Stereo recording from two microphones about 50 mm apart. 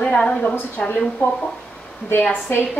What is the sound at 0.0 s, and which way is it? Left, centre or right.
A woman's voice, centre.